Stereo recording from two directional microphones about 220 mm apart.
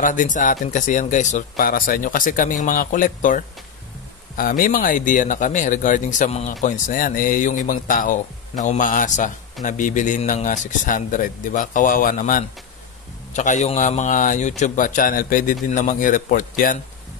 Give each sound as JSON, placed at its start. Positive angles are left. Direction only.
{"t": 0.0, "sound": "speech", "side_deg": 35}